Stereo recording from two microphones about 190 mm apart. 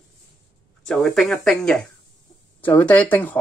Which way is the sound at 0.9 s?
Centre (ahead or behind).